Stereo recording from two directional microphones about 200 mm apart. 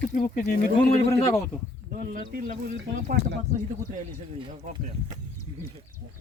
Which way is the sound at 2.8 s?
60° right (ahead or behind).